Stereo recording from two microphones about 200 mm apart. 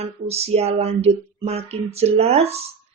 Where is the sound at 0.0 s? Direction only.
30° right (ahead or behind).